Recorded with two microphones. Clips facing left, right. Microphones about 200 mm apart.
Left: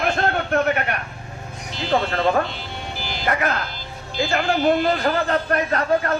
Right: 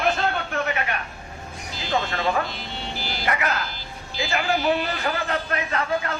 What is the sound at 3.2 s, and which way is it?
A man's voice, 50° left (ahead or behind).